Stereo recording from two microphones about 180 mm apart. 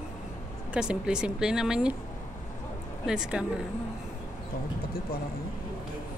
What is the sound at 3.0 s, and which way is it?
Speech, 5° right (ahead or behind).